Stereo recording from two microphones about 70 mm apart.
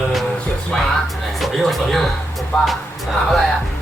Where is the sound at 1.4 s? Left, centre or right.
Centre.